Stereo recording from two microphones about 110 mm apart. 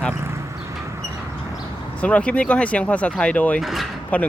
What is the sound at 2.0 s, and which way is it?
Speech, 10° left (ahead or behind).